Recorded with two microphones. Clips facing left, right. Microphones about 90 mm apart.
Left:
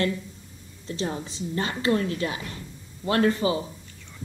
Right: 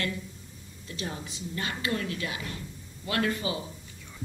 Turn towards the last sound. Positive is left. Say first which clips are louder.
# left 7 dB
turn(degrees=35)  # may be behind; listen again after turning